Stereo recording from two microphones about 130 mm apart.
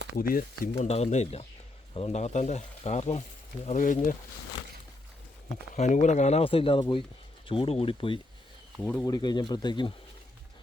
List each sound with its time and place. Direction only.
0.2 s speech: 90° left
0.8 s speech: 55° left (ahead or behind)
3.7 s speech: 75° left (ahead or behind)
5.7 s speech: 65° left (ahead or behind); by 8.2 s 40° left (ahead or behind)
8.8 s speech: 10° left (ahead or behind)
9.0 s speech: 30° left (ahead or behind)